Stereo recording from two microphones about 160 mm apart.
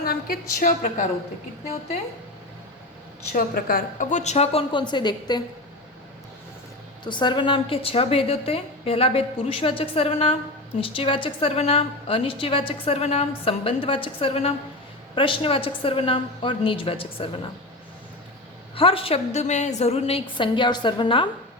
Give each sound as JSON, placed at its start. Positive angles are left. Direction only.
{"t": 0.0, "sound": "a woman's voice", "side_deg": 70}
{"t": 3.3, "sound": "a woman's voice", "side_deg": 65}
{"t": 7.0, "sound": "a woman's voice", "side_deg": 30}
{"t": 18.8, "sound": "a woman's voice", "side_deg": 35}